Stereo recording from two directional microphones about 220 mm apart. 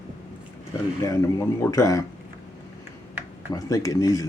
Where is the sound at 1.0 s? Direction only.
15° left (ahead or behind).